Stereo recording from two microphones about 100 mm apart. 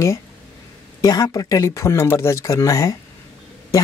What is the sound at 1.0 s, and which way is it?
Speech, 40° left (ahead or behind).